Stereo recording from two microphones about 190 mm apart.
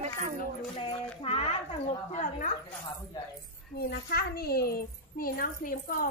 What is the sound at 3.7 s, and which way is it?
A woman's voice, 55° left (ahead or behind).